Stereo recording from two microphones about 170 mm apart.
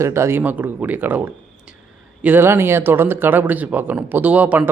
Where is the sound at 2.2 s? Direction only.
10° right (ahead or behind).